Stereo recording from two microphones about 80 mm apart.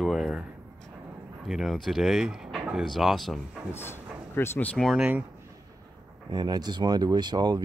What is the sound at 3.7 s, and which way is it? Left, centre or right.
Speech, left.